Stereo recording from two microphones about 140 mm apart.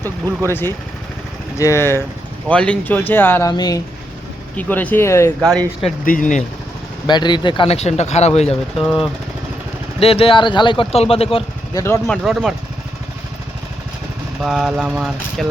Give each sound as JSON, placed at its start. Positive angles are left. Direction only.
{"t": 0.4, "sound": "speech", "side_deg": 15}
{"t": 3.5, "sound": "speech", "side_deg": 30}
{"t": 4.5, "sound": "speech", "side_deg": 10}
{"t": 6.1, "sound": "speech", "side_deg": 70}
{"t": 7.1, "sound": "speech", "side_deg": 30}
{"t": 8.8, "sound": "speech", "side_deg": -5}
{"t": 10.0, "sound": "speech", "side_deg": 45}
{"t": 10.9, "sound": "speech", "side_deg": 45}
{"t": 11.7, "sound": "speech", "side_deg": 20}
{"t": 12.0, "sound": "speech", "side_deg": 0}
{"t": 14.4, "sound": "speech", "side_deg": 0}